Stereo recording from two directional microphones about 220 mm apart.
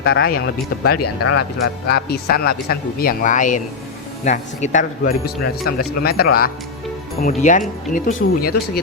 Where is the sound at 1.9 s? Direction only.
45° left (ahead or behind).